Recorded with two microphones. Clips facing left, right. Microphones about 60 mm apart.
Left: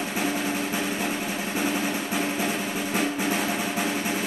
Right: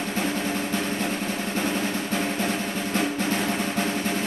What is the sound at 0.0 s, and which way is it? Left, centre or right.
Drum roll, centre.